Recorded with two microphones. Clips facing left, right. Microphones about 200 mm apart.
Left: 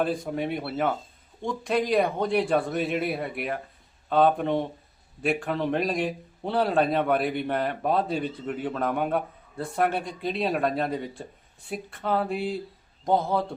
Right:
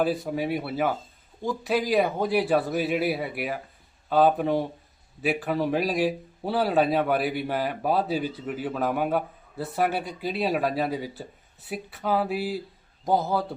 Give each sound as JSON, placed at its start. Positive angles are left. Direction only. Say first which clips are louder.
{"t": 0.0, "sound": "a man's voice", "louder": "right 1 dB", "side_deg": -5}